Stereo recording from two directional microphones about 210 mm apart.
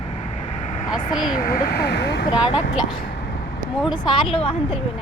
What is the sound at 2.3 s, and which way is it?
Speech, 5° right (ahead or behind).